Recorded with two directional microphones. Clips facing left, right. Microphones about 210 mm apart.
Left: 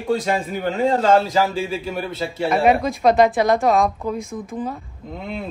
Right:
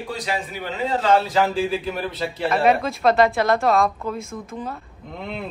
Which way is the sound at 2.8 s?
15° left (ahead or behind).